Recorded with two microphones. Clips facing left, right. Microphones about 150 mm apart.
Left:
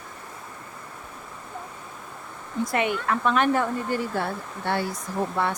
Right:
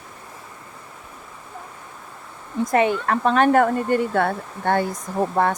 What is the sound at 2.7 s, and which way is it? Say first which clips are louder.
Speech: right 6 dB; 35° right (ahead or behind).